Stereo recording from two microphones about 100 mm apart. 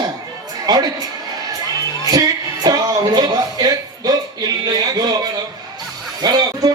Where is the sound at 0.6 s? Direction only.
40° right (ahead or behind).